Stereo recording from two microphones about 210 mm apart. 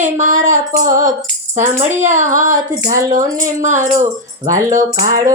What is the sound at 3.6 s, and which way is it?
Female singing, 35° right (ahead or behind).